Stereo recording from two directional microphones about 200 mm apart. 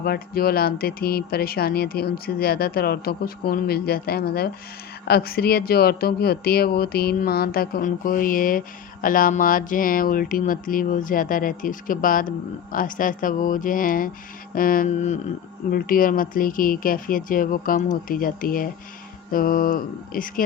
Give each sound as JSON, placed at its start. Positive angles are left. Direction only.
{"t": 0.0, "sound": "speech", "side_deg": 50}